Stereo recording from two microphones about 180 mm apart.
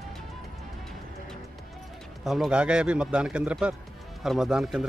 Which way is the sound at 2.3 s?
5° right (ahead or behind).